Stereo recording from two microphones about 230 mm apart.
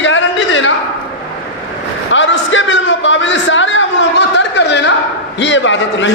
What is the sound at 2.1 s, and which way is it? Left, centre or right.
A man's voice, left.